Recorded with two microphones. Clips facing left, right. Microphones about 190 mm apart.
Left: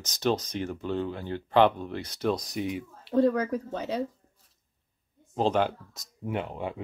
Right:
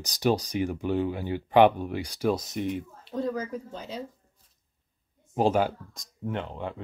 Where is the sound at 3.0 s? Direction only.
65° left (ahead or behind).